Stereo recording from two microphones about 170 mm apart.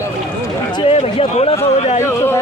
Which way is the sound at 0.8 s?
35° left (ahead or behind).